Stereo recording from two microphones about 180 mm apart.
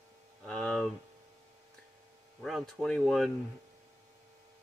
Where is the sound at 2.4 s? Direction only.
Centre (ahead or behind).